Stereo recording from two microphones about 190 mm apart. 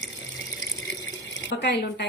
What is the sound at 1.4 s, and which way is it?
Speech, 60° left (ahead or behind).